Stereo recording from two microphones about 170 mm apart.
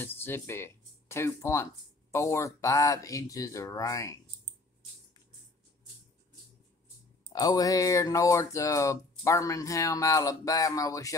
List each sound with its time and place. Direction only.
0.0 s speech: 10° left (ahead or behind)
7.3 s speech: 20° left (ahead or behind)